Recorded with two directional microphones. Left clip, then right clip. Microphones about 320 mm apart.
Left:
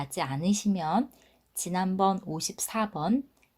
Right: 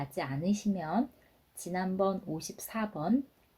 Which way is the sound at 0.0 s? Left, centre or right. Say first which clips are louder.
Left 4 dB; left.